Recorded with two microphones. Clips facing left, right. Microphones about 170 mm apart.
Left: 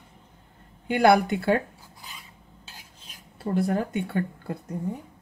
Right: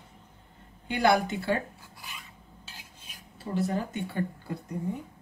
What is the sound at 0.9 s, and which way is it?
Speech, 60° left (ahead or behind).